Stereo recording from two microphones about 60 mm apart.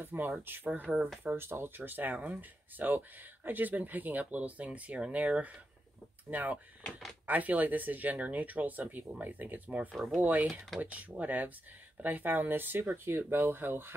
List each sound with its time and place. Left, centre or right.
0.0 s speech: right
0.9 s speech: centre
1.2 s speech: right
9.9 s speech: centre
10.2 s speech: right